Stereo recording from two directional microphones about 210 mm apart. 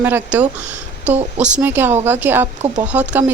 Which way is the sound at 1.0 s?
30° right (ahead or behind).